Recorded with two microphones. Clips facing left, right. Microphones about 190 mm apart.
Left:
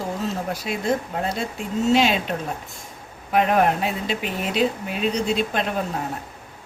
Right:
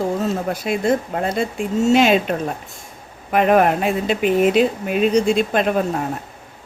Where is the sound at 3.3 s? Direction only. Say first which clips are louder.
Right 4 dB; 60° right (ahead or behind).